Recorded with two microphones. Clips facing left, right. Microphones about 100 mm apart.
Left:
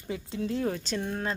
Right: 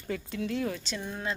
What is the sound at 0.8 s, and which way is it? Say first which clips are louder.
Speech: left 4 dB; 50° left (ahead or behind).